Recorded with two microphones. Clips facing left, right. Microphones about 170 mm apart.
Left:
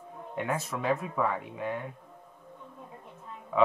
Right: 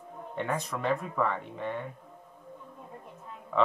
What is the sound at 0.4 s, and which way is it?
Speech, 5° left (ahead or behind).